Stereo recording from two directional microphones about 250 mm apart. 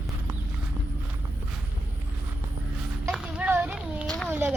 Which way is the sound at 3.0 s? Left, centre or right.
Centre.